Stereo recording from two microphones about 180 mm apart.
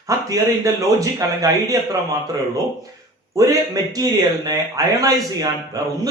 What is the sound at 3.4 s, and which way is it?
A man's voice, 20° right (ahead or behind).